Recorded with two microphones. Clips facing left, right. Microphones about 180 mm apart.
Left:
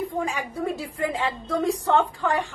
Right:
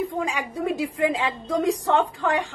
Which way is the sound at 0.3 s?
15° right (ahead or behind).